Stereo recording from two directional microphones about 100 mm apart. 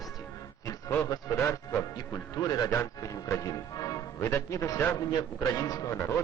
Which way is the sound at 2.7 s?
30° left (ahead or behind).